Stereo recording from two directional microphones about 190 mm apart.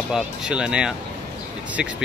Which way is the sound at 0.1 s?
5° right (ahead or behind).